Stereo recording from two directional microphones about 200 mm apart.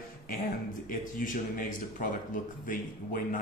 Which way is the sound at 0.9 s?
45° left (ahead or behind).